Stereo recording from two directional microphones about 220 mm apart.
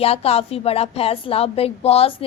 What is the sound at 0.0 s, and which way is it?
A woman's voice, 25° left (ahead or behind).